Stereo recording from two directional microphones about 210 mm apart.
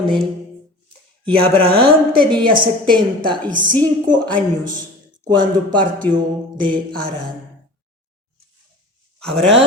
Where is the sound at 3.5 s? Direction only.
40° right (ahead or behind).